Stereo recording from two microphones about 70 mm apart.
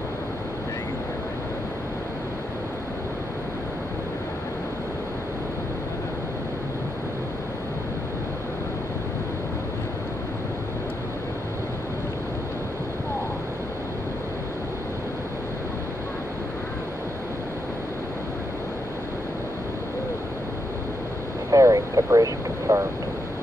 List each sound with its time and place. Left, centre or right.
21.5 s vehicle: right